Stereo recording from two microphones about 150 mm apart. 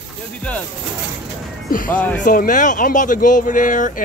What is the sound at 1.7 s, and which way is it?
Speech, 65° left (ahead or behind).